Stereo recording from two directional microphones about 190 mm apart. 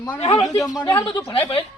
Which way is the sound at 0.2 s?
30° left (ahead or behind).